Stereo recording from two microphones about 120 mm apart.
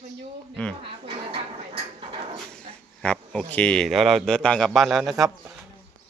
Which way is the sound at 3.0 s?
10° left (ahead or behind).